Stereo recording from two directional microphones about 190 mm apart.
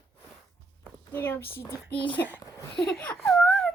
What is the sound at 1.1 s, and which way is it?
Speech, 10° left (ahead or behind).